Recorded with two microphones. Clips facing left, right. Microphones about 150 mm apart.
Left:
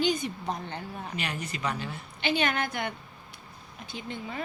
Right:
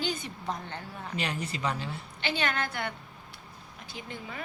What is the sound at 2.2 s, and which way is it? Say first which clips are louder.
A woman's voice: left 3 dB; 15° left (ahead or behind).